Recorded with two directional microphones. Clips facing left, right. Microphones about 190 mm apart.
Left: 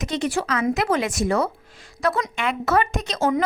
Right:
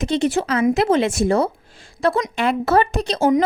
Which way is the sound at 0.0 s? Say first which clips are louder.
Right 5 dB; 30° right (ahead or behind).